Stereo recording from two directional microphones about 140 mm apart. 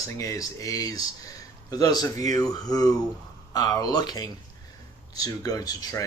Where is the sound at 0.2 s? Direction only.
25° left (ahead or behind).